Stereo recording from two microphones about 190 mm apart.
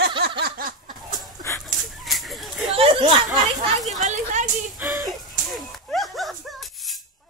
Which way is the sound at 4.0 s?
40° right (ahead or behind).